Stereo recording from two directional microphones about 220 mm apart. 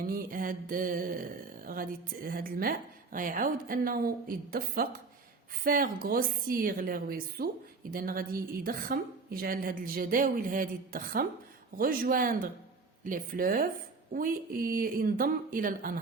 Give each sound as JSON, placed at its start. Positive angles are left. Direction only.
{"t": 0.1, "sound": "a woman's voice", "side_deg": -40}